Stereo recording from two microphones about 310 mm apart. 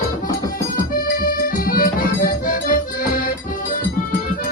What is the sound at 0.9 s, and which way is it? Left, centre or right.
Accordion, left.